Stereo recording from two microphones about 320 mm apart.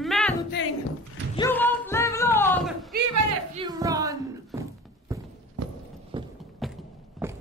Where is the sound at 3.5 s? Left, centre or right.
Centre.